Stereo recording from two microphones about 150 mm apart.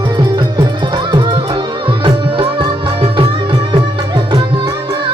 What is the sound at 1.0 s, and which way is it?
Music, 30° right (ahead or behind).